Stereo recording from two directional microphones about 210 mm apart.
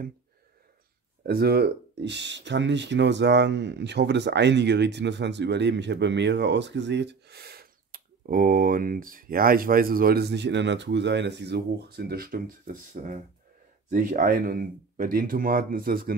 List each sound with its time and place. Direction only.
1.2 s speech: 45° right (ahead or behind)